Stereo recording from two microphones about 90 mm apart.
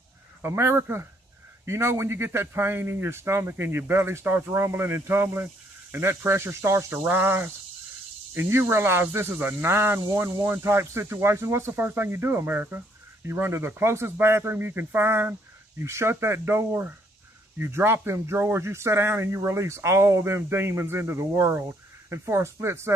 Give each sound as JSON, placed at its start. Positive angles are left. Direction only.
{"t": 0.4, "sound": "speech", "side_deg": -30}